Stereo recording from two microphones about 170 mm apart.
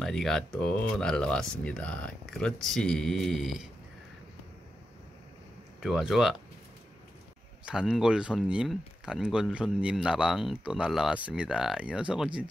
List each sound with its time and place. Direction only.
0.0 s speech: centre (ahead or behind)
5.8 s speech: centre (ahead or behind)
7.6 s speech: 5° right (ahead or behind)